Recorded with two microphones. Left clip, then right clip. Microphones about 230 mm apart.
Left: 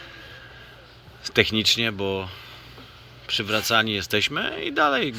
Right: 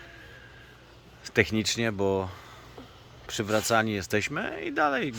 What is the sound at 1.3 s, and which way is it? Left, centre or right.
Speech, centre.